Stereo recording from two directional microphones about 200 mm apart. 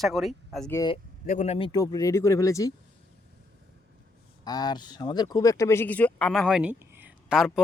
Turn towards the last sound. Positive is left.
turn(degrees=-5)  # may be behind; listen again after turning